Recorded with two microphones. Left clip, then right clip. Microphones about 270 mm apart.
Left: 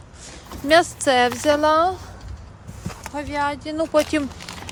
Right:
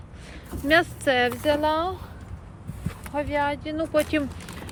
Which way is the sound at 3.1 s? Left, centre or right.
Centre.